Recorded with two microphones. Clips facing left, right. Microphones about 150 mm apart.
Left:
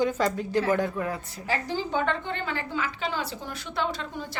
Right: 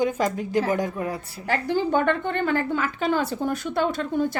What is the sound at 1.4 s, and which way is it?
A woman's voice, 60° right (ahead or behind).